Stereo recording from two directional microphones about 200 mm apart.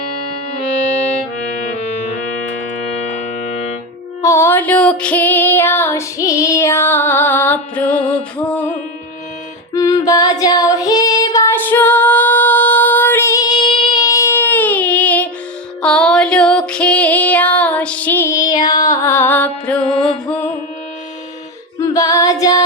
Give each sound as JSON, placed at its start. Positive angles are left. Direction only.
{"t": 3.1, "sound": "music", "side_deg": 35}
{"t": 4.2, "sound": "female singing", "side_deg": 15}
{"t": 8.4, "sound": "music", "side_deg": 5}
{"t": 9.7, "sound": "female singing", "side_deg": 20}
{"t": 15.8, "sound": "music", "side_deg": 5}
{"t": 21.8, "sound": "female singing", "side_deg": 15}